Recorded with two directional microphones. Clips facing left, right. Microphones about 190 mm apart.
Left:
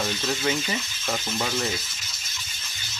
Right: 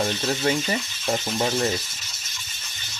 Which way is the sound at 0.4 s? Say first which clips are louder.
Right 3 dB; 40° right (ahead or behind).